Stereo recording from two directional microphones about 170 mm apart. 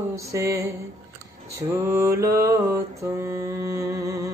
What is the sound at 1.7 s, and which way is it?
Mantra, 15° right (ahead or behind).